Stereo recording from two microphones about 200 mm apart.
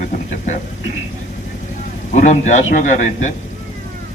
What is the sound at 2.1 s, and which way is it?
A man's voice, 35° left (ahead or behind).